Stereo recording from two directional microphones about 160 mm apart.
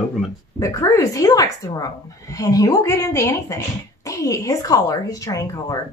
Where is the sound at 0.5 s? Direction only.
20° left (ahead or behind).